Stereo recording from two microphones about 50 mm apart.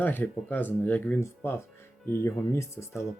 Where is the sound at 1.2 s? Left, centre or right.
Left.